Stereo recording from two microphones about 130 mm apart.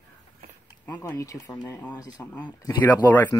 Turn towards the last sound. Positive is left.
turn(degrees=15)  # may be behind; listen again after turning